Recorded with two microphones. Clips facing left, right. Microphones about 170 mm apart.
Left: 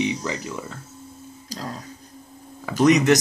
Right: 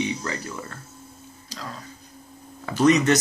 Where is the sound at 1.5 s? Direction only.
40° left (ahead or behind).